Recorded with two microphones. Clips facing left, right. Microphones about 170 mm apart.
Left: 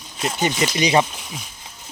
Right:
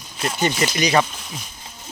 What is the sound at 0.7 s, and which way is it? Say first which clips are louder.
Speech: left 1 dB; 20° left (ahead or behind).